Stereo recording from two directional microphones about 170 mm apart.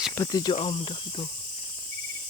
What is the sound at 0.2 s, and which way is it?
Speech, 20° left (ahead or behind).